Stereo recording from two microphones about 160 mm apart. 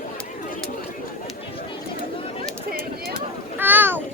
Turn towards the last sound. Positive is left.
turn(degrees=-10)  # may be behind; listen again after turning